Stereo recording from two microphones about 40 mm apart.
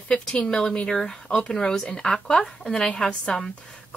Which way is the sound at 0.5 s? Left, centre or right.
Centre.